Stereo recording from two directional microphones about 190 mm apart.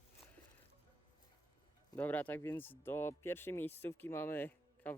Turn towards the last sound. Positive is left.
turn(degrees=10)  # may be behind; listen again after turning